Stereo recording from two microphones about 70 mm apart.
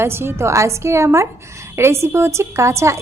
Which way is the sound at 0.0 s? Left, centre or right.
Right.